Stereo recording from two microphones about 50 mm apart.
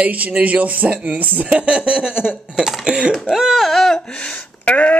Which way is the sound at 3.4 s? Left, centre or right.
Centre.